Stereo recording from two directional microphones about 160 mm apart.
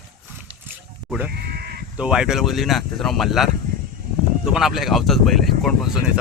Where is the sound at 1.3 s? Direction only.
75° right (ahead or behind).